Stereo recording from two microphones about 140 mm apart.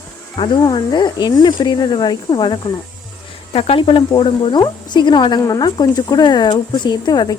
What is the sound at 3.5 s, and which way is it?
Speech, 45° left (ahead or behind).